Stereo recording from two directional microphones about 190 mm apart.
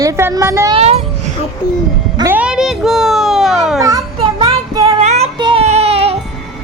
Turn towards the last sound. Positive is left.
turn(degrees=-30)  # may be behind; listen again after turning